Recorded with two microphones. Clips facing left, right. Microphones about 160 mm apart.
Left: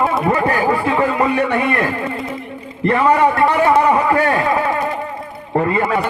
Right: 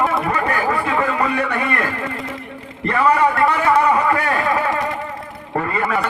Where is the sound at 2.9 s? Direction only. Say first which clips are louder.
Left 2 dB; 25° left (ahead or behind).